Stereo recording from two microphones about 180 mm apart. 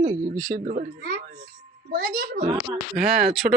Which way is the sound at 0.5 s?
50° right (ahead or behind).